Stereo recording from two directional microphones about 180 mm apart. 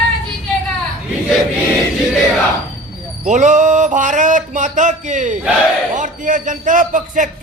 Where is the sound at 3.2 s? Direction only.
40° right (ahead or behind).